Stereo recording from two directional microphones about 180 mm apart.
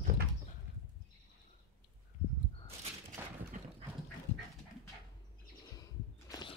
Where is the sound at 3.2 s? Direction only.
15° right (ahead or behind).